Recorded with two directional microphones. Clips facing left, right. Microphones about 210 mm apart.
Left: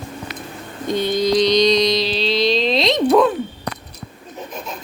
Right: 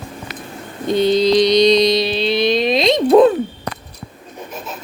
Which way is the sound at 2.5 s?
15° right (ahead or behind).